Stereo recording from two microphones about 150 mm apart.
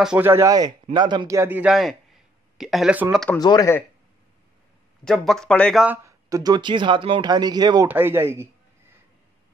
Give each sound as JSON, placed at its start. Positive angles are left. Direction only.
{"t": 0.0, "sound": "a man's voice", "side_deg": -5}
{"t": 0.3, "sound": "a man's voice", "side_deg": -20}
{"t": 3.3, "sound": "speech", "side_deg": 25}
{"t": 5.0, "sound": "speech", "side_deg": 0}
{"t": 5.9, "sound": "speech", "side_deg": -20}
{"t": 7.9, "sound": "a man's voice", "side_deg": -15}